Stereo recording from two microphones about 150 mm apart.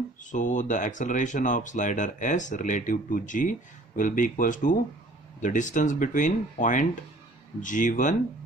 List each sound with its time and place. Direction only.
0.2 s speech: 55° left (ahead or behind)